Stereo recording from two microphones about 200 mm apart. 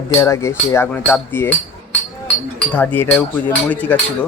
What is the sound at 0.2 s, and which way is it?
Cutlery, 15° left (ahead or behind).